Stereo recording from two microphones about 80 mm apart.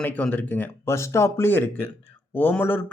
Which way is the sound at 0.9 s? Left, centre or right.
Left.